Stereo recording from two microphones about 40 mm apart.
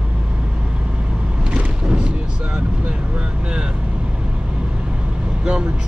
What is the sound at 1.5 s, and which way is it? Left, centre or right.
Boat, right.